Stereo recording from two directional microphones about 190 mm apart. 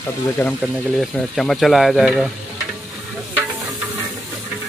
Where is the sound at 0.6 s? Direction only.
Centre (ahead or behind).